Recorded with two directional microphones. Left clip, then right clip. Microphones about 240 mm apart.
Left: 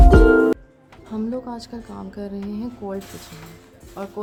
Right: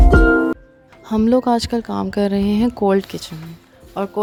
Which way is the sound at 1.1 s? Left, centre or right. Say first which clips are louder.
Right 13 dB; right.